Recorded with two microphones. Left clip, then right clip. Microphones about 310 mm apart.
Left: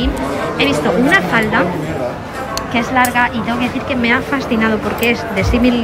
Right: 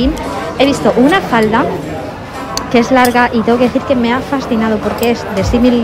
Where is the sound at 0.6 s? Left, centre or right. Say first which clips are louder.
Right 5 dB; centre.